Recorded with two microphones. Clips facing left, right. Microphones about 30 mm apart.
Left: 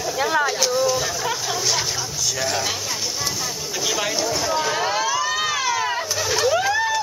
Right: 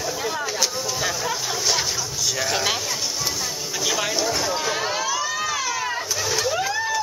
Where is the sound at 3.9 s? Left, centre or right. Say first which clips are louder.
Even; centre.